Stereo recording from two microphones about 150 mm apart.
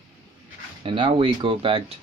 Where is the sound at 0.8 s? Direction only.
35° right (ahead or behind).